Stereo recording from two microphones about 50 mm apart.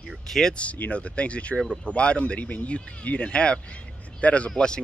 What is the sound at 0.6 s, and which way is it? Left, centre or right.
Speech, left.